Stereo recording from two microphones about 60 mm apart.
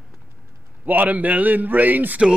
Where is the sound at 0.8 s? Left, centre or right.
Right.